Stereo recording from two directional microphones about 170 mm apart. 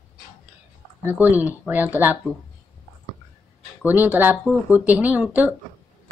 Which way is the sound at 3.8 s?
10° right (ahead or behind).